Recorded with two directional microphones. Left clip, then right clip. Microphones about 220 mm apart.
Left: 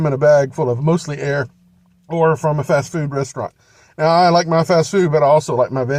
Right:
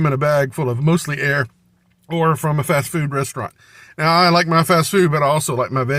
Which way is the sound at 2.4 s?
35° right (ahead or behind).